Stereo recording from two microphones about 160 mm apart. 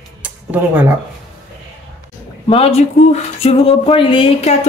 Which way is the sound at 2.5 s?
40° left (ahead or behind).